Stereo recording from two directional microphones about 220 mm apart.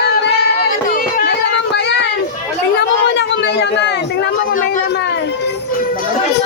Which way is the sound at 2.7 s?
50° left (ahead or behind).